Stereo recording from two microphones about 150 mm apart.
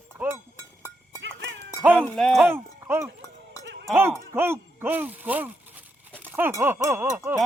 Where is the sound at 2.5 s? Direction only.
15° right (ahead or behind).